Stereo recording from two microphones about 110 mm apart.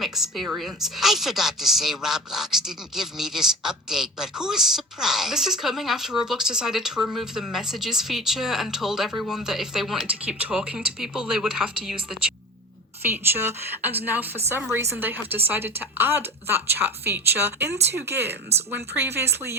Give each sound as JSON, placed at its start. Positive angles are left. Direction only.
{"t": 0.0, "sound": "a woman's voice", "side_deg": 0}
{"t": 13.3, "sound": "a woman's voice", "side_deg": -20}